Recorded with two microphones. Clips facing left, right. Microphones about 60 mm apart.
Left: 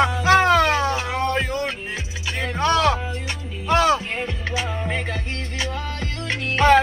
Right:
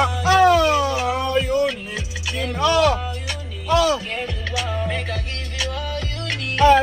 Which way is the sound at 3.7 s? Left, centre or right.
Left.